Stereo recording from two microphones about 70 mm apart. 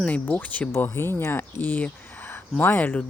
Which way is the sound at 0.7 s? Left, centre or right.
Left.